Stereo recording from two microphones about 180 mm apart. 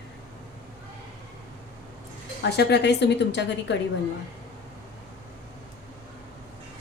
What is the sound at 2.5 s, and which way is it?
A woman's voice, 65° left (ahead or behind).